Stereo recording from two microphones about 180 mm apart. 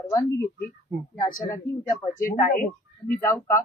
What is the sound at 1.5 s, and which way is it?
Speech, 15° left (ahead or behind).